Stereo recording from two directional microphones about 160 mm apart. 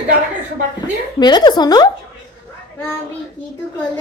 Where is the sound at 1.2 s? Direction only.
25° left (ahead or behind).